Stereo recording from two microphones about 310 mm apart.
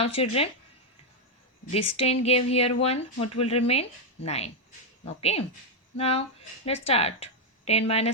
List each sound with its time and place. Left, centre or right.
0.0 s speech: centre
2.0 s speech: centre